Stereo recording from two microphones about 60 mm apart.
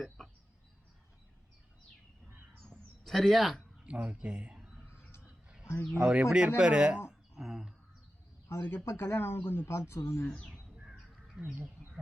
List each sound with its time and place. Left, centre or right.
2.6 s a sound: centre
3.8 s speech: right
5.9 s speech: centre
7.1 s a sound: centre
8.7 s speech: left
10.5 s bird: centre
11.4 s speech: right